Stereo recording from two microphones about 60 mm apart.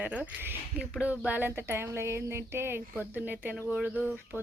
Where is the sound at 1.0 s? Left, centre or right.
Right.